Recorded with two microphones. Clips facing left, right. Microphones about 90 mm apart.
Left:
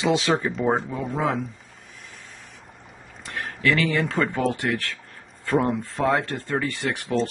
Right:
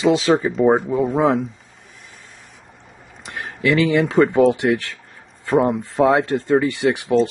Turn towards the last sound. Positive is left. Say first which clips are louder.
# right 8 dB
turn(degrees=-15)  # may be behind; listen again after turning